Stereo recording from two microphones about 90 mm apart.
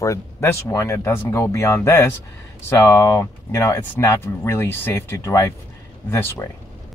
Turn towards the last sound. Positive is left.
turn(degrees=30)  # may be behind; listen again after turning